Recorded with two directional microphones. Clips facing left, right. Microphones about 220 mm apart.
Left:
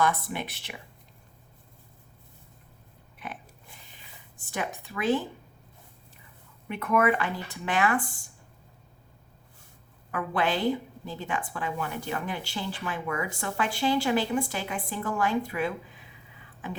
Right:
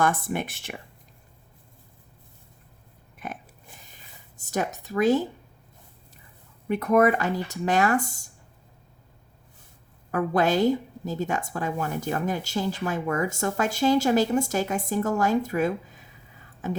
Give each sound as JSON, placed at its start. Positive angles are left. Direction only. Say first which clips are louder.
{"t": 0.0, "sound": "a woman's voice", "louder": "right 3 dB", "side_deg": -50}
{"t": 3.2, "sound": "oink", "louder": "right 4 dB", "side_deg": -45}
{"t": 3.9, "sound": "speech", "louder": "right 1 dB", "side_deg": -40}
{"t": 6.7, "sound": "speech", "louder": "right 5 dB", "side_deg": -40}
{"t": 10.1, "sound": "a woman's voice", "louder": "right 5 dB", "side_deg": -40}